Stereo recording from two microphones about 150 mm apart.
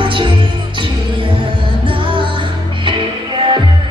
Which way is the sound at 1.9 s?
35° right (ahead or behind).